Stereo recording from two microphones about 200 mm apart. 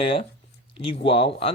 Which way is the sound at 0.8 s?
30° left (ahead or behind).